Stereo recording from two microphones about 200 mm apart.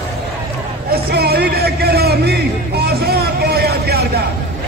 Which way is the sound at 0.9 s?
50° right (ahead or behind).